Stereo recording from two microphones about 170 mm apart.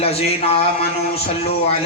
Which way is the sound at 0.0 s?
35° left (ahead or behind).